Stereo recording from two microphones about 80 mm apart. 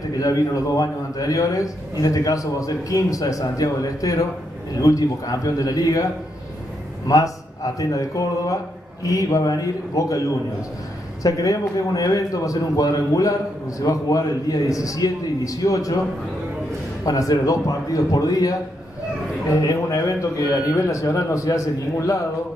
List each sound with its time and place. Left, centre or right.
0.2 s a man's voice: left
7.1 s a man's voice: left
11.2 s a man's voice: left
17.0 s a man's voice: left
19.5 s speech: left